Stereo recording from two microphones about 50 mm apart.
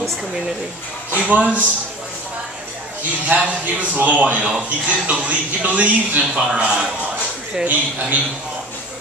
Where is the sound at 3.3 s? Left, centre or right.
Right.